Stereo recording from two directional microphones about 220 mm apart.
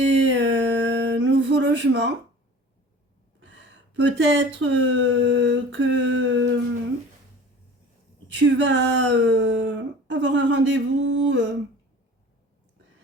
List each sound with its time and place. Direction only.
0.1 s a sound: 60° right (ahead or behind)
3.9 s speech: 55° right (ahead or behind)
8.3 s speech: 55° right (ahead or behind)